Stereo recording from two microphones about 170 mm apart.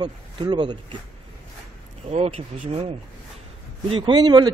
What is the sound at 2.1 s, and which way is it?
A man's voice, 40° right (ahead or behind).